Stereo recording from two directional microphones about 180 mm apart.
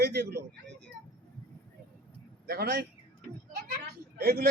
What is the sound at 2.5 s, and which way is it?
Speech, 55° right (ahead or behind).